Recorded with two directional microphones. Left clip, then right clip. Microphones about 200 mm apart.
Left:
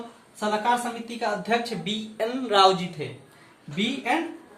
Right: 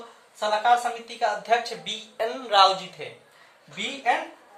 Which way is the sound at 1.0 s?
30° right (ahead or behind).